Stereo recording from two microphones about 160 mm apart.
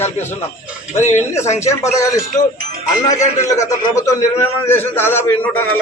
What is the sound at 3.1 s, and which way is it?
Speech, 50° left (ahead or behind).